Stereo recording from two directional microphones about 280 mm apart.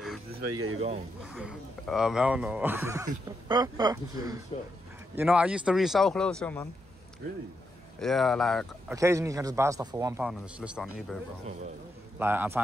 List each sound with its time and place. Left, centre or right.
0.3 s speech: right
1.2 s a man's voice: centre
8.0 s speech: centre
8.9 s a man's voice: centre
12.2 s a man's voice: centre